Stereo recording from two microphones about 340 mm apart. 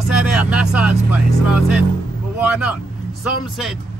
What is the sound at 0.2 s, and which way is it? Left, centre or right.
Speech, centre.